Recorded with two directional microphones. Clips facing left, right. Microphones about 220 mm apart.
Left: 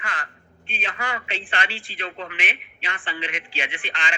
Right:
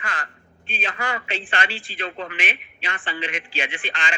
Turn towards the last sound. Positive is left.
turn(degrees=-40)  # may be behind; listen again after turning